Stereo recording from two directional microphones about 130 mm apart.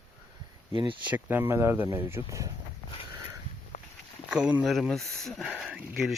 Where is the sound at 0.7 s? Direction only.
40° right (ahead or behind).